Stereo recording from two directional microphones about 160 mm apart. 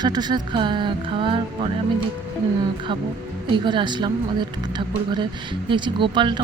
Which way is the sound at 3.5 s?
30° right (ahead or behind).